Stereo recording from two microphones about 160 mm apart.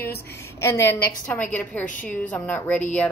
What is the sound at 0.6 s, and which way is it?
A woman's voice, 15° left (ahead or behind).